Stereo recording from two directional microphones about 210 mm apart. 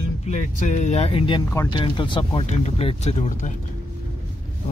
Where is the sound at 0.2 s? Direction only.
35° left (ahead or behind).